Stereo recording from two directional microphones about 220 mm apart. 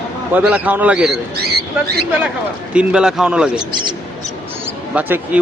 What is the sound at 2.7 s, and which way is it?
Speech, 5° right (ahead or behind).